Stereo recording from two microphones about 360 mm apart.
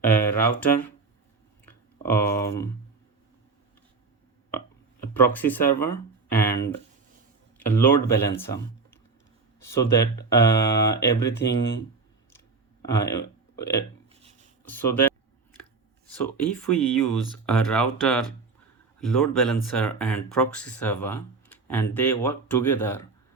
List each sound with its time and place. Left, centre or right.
0.0 s a sound: centre
0.6 s speech: centre
1.6 s a sound: centre
5.1 s speech: centre
7.6 s speech: centre
12.8 s speech: centre
14.1 s a sound: centre
14.6 s speech: centre
16.1 s speech: centre